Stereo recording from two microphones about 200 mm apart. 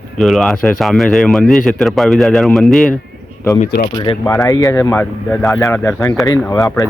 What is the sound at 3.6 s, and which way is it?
Speech, 40° left (ahead or behind).